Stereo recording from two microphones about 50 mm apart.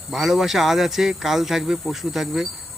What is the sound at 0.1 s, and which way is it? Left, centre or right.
Speech, centre.